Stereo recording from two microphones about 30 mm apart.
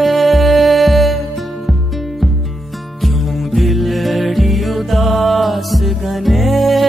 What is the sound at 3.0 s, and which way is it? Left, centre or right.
Music, centre.